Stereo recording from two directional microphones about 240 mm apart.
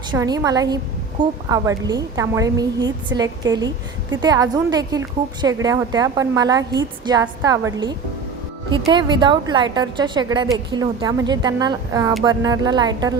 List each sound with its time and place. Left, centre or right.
0.1 s a woman's voice: centre